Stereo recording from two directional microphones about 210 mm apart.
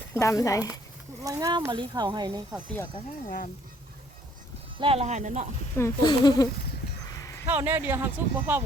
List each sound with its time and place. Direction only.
0.1 s speech: 15° left (ahead or behind)
1.2 s speech: 15° right (ahead or behind)
3.2 s speech: 40° left (ahead or behind)
4.8 s speech: 30° right (ahead or behind)
5.7 s speech: 15° left (ahead or behind)
7.4 s speech: 10° right (ahead or behind)